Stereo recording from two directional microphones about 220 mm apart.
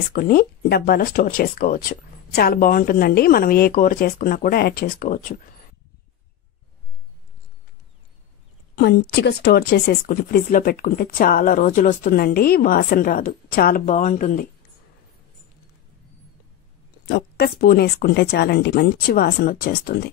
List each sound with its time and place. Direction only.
0.1 s speech: 40° left (ahead or behind)
8.7 s speech: 50° left (ahead or behind); by 14.5 s 35° left (ahead or behind)
17.1 s speech: 45° left (ahead or behind)